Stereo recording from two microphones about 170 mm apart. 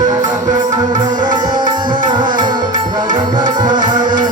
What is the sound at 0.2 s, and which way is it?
Music, 20° right (ahead or behind).